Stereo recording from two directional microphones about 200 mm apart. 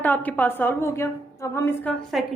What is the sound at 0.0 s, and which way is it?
A woman's voice, 10° left (ahead or behind).